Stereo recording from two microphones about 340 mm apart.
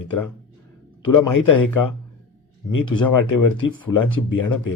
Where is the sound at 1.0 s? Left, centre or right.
Left.